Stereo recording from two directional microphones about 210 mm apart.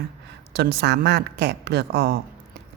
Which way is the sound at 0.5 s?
50° right (ahead or behind).